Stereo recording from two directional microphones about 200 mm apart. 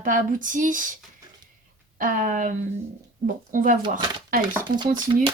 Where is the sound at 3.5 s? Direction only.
40° right (ahead or behind).